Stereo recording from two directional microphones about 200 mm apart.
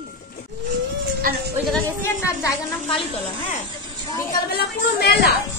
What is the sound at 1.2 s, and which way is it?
Speech, 50° right (ahead or behind).